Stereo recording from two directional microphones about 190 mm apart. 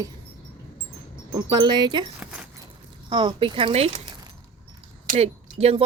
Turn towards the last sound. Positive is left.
turn(degrees=-30)  # may be behind; listen again after turning